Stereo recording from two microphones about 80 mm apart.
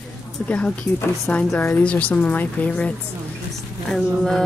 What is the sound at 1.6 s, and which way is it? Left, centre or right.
Speech, left.